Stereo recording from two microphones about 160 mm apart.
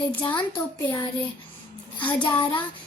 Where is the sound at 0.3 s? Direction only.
20° left (ahead or behind).